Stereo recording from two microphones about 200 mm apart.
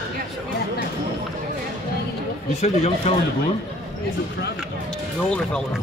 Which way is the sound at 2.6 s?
35° left (ahead or behind).